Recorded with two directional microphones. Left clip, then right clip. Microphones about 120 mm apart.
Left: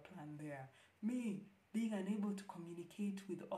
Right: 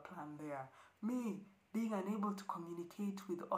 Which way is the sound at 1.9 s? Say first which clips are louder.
Right 4 dB; 20° right (ahead or behind).